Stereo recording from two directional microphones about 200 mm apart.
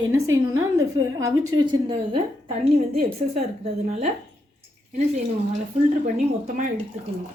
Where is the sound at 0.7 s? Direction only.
15° right (ahead or behind).